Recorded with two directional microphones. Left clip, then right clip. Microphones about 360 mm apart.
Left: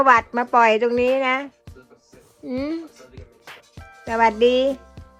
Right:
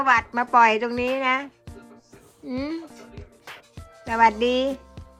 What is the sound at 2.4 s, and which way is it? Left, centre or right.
Music, centre.